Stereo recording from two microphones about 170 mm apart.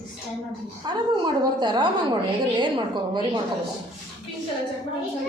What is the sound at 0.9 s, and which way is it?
A woman's voice, 25° right (ahead or behind).